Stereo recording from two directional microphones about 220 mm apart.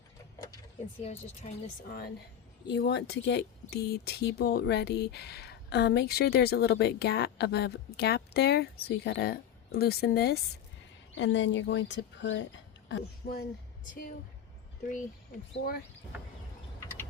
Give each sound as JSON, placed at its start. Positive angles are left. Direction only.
{"t": 1.0, "sound": "speech", "side_deg": 30}
{"t": 2.6, "sound": "speech", "side_deg": 50}
{"t": 11.1, "sound": "speech", "side_deg": 55}
{"t": 13.9, "sound": "a woman's voice", "side_deg": 40}